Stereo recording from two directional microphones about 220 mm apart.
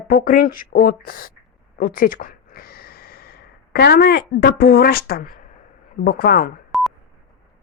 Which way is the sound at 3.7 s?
45° left (ahead or behind).